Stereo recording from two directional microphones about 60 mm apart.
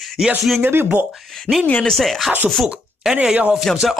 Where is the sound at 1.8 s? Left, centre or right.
Centre.